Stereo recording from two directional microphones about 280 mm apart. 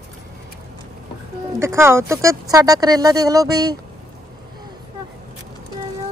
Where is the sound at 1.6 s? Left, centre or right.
Centre.